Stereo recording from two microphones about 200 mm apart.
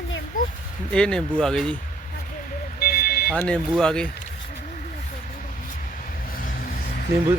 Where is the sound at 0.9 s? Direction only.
5° left (ahead or behind).